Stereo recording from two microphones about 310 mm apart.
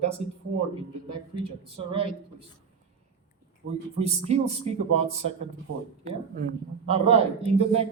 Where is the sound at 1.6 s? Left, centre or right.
Centre.